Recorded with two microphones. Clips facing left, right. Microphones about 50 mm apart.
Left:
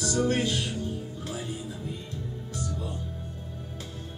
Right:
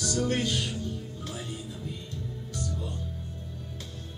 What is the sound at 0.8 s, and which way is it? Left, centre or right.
Music, left.